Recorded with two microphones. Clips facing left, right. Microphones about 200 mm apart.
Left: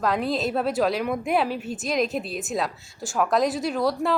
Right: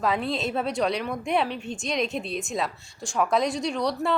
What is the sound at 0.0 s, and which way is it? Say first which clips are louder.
A woman's voice: left 2 dB; centre (ahead or behind).